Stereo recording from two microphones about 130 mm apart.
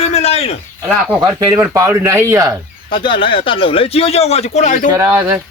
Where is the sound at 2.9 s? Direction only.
40° left (ahead or behind); by 4.9 s 70° left (ahead or behind).